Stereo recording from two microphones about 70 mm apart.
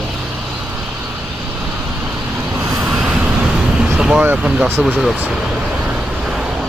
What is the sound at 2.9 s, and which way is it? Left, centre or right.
Vehicle, centre.